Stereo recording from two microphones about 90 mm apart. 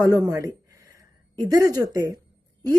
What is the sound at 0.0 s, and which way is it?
A woman's voice, 40° right (ahead or behind).